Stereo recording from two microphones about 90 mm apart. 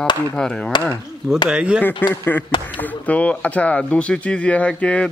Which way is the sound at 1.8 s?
20° left (ahead or behind).